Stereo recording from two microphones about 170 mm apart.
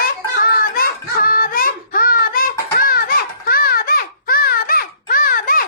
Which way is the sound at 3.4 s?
60° left (ahead or behind).